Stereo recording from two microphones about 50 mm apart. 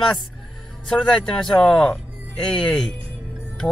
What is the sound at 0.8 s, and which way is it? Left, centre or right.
Speech, centre.